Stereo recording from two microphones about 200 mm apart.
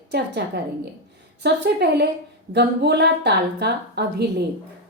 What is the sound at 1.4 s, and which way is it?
A woman's voice, 60° right (ahead or behind).